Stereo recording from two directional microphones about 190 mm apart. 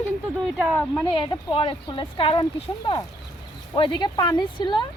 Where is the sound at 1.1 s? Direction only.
25° left (ahead or behind).